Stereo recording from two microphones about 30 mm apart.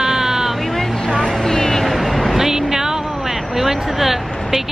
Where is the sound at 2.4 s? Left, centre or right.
Centre.